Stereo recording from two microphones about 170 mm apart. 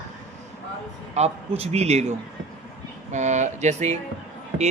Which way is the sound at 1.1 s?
40° right (ahead or behind).